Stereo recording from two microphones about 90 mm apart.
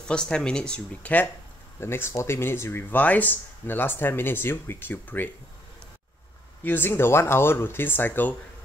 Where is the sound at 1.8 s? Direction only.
30° left (ahead or behind).